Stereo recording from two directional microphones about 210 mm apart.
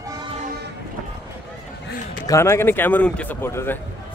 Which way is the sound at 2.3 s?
15° left (ahead or behind).